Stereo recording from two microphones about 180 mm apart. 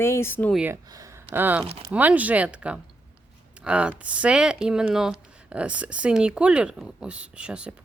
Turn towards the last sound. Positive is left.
turn(degrees=-5)  # may be behind; listen again after turning